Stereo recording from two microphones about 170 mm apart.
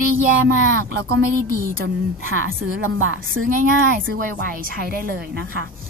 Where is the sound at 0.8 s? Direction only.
65° right (ahead or behind).